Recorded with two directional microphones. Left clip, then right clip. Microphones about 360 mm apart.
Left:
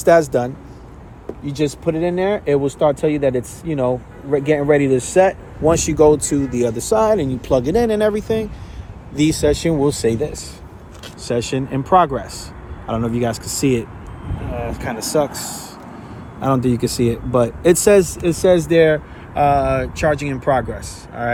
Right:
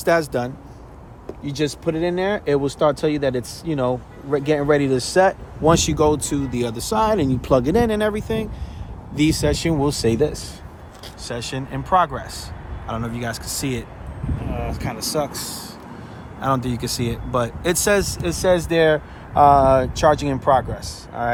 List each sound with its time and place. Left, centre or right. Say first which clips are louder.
0.0 s speech: left 6 dB; centre
9.6 s speech: left 3 dB; centre
11.2 s speech: left 8 dB; centre
16.4 s speech: left 4 dB; centre